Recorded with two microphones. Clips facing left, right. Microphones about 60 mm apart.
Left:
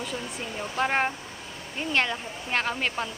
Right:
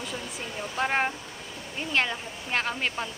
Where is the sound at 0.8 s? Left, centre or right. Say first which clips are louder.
Left 1 dB; centre.